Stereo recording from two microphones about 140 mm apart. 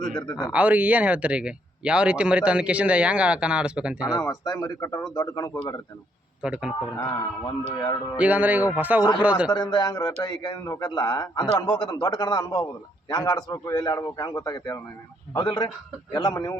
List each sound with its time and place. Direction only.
0.2 s a man's voice: 30° left (ahead or behind)
0.5 s a man's voice: 10° right (ahead or behind)
4.1 s a man's voice: 25° left (ahead or behind)
6.4 s a man's voice: 5° right (ahead or behind)
7.0 s a man's voice: 25° left (ahead or behind)
8.2 s a man's voice: 10° right (ahead or behind)
9.5 s a man's voice: 30° left (ahead or behind)